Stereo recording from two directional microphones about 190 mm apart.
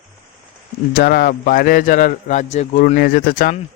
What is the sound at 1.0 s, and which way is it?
Speech, 55° left (ahead or behind).